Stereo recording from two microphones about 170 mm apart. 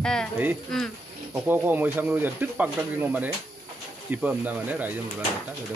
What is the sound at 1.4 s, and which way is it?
Speech, 10° right (ahead or behind).